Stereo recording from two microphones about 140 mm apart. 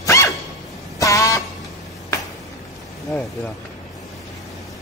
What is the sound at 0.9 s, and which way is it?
Vehicle horn, 25° left (ahead or behind).